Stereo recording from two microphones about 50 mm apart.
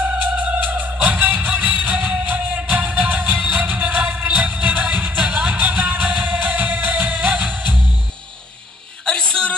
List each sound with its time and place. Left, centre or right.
0.0 s music: right
5.2 s music: centre
5.7 s music: right
9.0 s a sound: centre